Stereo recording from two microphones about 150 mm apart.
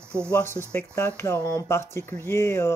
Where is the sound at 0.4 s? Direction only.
15° left (ahead or behind).